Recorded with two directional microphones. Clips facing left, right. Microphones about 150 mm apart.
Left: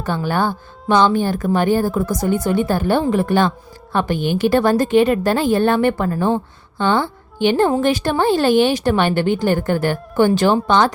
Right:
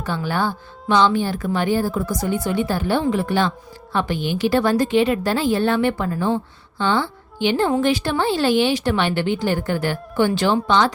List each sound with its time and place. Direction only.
0.0 s a woman's voice: 45° left (ahead or behind)